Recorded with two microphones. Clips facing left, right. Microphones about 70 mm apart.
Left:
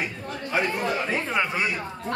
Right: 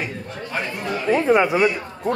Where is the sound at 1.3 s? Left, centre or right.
Centre.